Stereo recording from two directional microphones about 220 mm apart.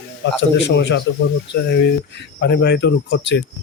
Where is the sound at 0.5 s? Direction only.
50° left (ahead or behind).